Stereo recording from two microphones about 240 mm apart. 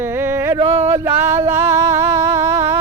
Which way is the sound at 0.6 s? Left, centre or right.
Right.